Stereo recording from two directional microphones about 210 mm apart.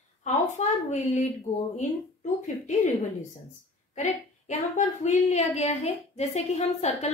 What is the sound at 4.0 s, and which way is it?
A woman's voice, 35° left (ahead or behind).